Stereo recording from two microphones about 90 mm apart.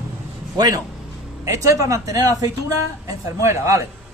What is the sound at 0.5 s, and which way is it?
A man's voice, 45° right (ahead or behind).